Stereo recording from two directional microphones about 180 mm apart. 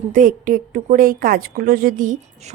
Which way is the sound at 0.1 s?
50° right (ahead or behind).